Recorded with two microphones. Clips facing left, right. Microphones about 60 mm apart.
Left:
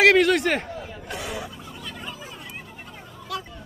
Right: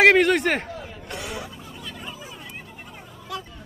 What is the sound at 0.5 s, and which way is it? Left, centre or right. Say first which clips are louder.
Chatter: even; centre.